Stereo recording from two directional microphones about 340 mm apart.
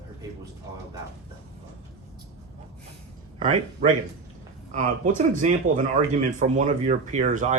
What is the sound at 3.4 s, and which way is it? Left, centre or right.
Speech, right.